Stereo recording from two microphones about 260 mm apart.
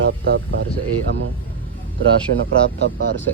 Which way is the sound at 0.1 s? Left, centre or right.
Right.